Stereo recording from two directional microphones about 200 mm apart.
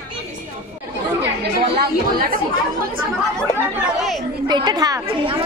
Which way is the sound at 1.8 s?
45° right (ahead or behind).